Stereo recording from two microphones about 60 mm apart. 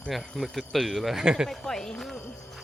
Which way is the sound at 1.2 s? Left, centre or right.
Centre.